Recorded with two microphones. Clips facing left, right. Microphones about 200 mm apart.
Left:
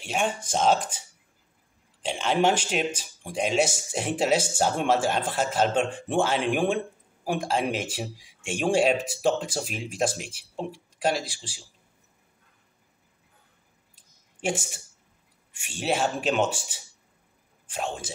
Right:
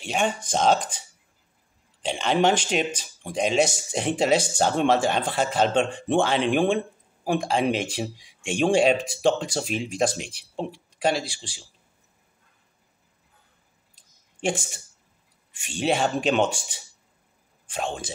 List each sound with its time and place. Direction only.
0.0 s speech: 5° left (ahead or behind)
13.9 s a sound: 5° left (ahead or behind)
15.5 s speech: 10° left (ahead or behind)